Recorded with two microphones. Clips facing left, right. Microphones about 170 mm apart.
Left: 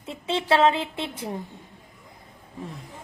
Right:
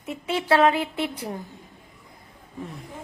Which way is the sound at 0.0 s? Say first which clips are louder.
Even; 25° left (ahead or behind).